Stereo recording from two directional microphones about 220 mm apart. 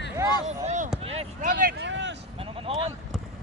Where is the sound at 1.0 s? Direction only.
35° right (ahead or behind); by 2.1 s 55° right (ahead or behind).